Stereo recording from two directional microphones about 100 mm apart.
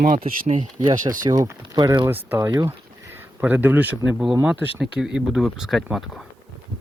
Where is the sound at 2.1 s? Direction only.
20° right (ahead or behind).